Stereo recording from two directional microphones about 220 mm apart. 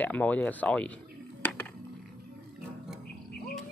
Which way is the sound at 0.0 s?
5° left (ahead or behind).